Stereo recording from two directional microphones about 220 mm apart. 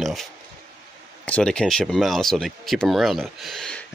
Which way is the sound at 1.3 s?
5° left (ahead or behind).